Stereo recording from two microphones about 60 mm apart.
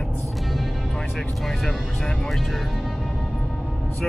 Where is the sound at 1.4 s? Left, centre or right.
Centre.